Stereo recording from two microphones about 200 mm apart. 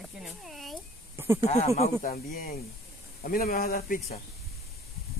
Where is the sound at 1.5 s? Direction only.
35° left (ahead or behind).